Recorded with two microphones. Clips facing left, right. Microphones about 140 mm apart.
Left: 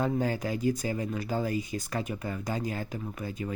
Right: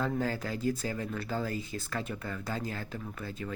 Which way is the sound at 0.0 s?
15° left (ahead or behind).